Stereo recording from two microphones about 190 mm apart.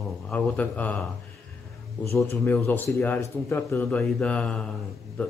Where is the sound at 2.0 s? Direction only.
15° left (ahead or behind).